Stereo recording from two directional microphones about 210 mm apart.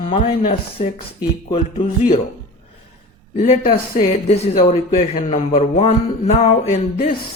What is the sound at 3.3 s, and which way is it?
Speech, 35° left (ahead or behind).